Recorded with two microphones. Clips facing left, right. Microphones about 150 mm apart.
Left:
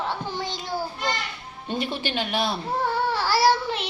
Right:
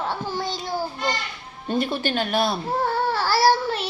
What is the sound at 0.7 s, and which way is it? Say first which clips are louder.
Children playing: even; 10° right (ahead or behind).